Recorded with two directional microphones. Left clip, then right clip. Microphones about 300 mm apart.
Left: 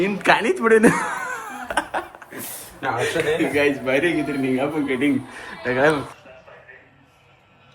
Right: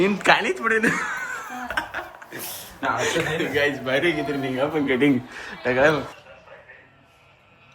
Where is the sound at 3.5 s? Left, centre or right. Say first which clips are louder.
Left 2 dB; right.